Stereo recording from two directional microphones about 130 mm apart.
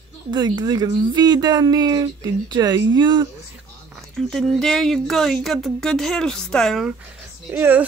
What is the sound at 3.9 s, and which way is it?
Speech, centre (ahead or behind).